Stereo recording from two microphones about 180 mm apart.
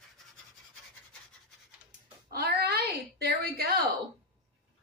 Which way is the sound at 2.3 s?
60° right (ahead or behind).